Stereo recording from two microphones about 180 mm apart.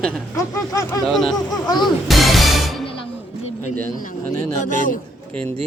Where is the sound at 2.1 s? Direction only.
Centre (ahead or behind).